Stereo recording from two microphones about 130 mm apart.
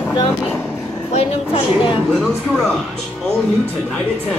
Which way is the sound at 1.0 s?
55° left (ahead or behind).